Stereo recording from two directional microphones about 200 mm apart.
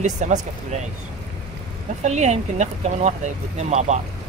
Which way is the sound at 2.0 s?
35° right (ahead or behind).